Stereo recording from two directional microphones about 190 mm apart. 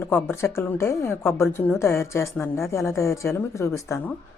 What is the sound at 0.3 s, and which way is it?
A woman's voice, 15° left (ahead or behind).